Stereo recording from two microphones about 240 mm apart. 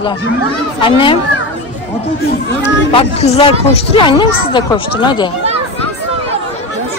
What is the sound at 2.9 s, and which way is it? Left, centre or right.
Speech, left.